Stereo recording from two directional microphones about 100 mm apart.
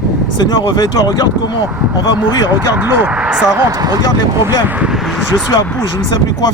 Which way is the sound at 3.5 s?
40° right (ahead or behind).